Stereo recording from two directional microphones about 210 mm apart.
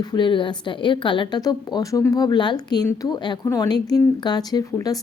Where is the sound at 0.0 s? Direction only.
20° left (ahead or behind).